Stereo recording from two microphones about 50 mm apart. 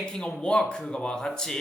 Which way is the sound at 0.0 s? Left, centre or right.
Centre.